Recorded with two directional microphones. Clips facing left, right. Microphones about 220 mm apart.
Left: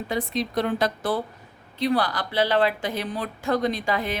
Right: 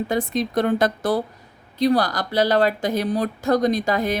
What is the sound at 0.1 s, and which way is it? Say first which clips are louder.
Speech: right 1 dB; 45° right (ahead or behind).